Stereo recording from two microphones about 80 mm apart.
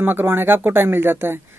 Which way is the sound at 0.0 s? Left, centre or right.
Right.